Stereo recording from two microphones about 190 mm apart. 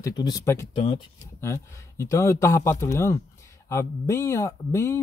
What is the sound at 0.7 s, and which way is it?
Speech, 25° left (ahead or behind).